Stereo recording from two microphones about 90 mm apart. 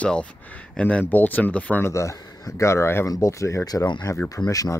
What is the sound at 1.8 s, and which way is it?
Speech, 35° left (ahead or behind).